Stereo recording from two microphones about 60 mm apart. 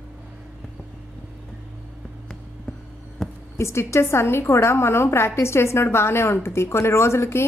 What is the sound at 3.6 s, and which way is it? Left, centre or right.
A woman's voice, left.